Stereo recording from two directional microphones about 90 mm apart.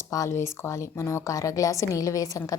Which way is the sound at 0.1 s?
35° left (ahead or behind).